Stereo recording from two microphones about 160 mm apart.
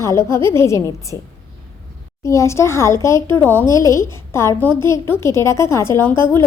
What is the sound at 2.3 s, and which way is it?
A woman's voice, 20° left (ahead or behind).